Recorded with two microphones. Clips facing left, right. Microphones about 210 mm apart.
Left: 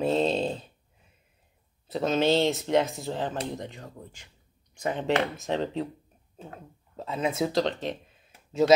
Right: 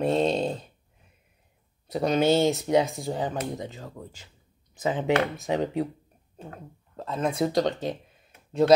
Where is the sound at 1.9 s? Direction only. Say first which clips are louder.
Right 2 dB; centre (ahead or behind).